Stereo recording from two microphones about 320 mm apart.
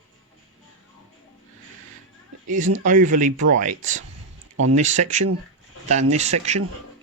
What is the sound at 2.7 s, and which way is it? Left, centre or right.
Speech, right.